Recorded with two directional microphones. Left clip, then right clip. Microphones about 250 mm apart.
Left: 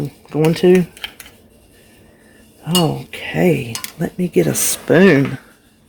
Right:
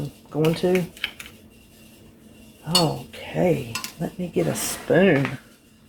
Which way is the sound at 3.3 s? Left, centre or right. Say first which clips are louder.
Left 5 dB; left.